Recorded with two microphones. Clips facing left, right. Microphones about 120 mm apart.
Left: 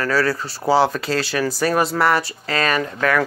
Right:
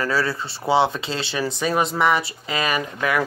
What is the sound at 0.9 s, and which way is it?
Speech, 25° right (ahead or behind).